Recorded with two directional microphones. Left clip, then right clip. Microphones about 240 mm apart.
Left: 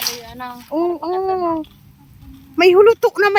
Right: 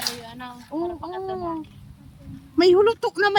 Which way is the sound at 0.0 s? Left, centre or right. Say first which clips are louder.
Left 5 dB; centre.